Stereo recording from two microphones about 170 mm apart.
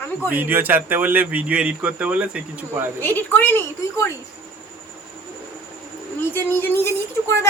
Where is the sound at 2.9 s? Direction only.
10° left (ahead or behind).